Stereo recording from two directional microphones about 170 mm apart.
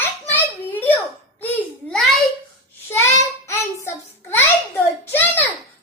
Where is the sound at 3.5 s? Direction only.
15° left (ahead or behind).